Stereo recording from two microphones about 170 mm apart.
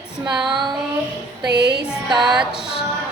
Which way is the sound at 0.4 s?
30° right (ahead or behind).